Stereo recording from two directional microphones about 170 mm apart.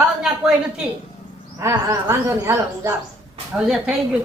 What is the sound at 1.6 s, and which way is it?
A woman's voice, 15° right (ahead or behind).